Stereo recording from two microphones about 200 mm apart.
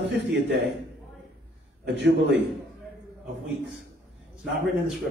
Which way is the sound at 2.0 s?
60° right (ahead or behind).